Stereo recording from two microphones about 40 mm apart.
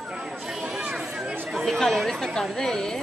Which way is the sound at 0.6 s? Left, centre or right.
Centre.